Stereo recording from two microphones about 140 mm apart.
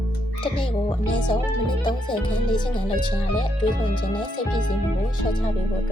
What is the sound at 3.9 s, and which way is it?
Speech, 35° left (ahead or behind).